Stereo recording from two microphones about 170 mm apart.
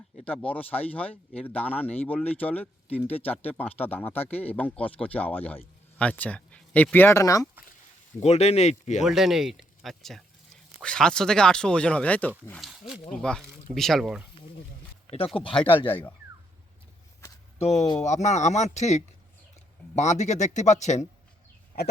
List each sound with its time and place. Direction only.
0.3 s speech: 10° left (ahead or behind)
8.2 s speech: 40° left (ahead or behind)
9.0 s speech: centre (ahead or behind)
15.0 s a sound: 35° left (ahead or behind)
15.4 s speech: 30° left (ahead or behind)
17.6 s speech: 40° left (ahead or behind)